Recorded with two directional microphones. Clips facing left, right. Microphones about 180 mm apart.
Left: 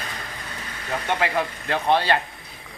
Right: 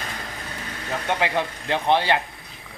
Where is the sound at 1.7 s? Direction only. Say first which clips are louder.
Even; 20° right (ahead or behind).